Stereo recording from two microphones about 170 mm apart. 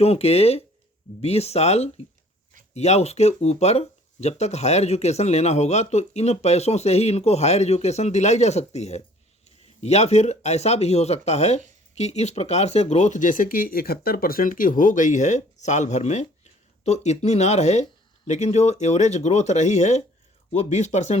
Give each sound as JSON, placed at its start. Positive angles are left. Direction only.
{"t": 0.0, "sound": "speech", "side_deg": 35}